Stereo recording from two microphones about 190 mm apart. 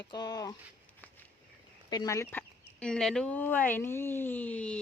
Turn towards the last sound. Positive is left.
turn(degrees=5)  # may be behind; listen again after turning